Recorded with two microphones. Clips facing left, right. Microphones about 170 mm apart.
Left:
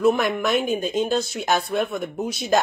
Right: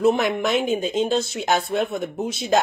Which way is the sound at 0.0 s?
25° right (ahead or behind).